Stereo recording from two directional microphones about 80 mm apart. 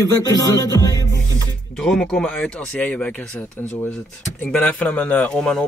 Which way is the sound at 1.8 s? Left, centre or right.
Centre.